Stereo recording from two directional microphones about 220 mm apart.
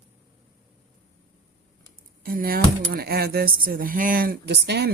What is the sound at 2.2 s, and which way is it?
Speech, 40° right (ahead or behind).